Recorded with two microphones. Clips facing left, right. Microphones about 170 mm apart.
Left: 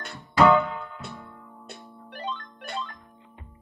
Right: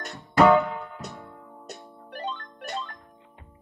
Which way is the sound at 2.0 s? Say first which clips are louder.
Right 1 dB; 40° right (ahead or behind).